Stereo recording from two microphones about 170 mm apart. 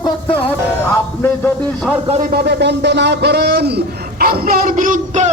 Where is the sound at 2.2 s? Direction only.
70° right (ahead or behind).